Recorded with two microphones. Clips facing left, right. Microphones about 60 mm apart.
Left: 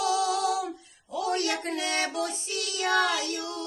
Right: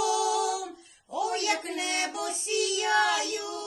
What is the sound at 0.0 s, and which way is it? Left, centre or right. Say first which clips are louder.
Female singing: even; left.